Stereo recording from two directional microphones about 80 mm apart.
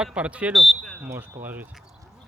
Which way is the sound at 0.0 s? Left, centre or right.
Centre.